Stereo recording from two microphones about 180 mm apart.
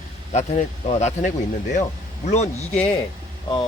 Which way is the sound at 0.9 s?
40° left (ahead or behind).